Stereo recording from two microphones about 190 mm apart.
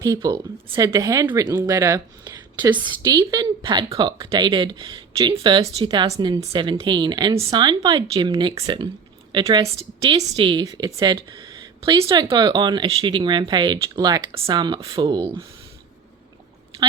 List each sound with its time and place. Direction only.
0.0 s a woman's voice: 20° right (ahead or behind)